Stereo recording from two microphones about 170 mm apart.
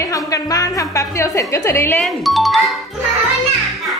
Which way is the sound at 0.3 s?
20° left (ahead or behind).